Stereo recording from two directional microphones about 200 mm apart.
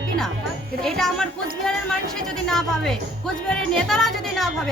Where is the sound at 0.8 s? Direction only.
Centre (ahead or behind).